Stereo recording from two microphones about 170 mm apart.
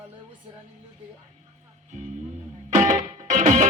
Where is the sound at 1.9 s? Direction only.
45° right (ahead or behind).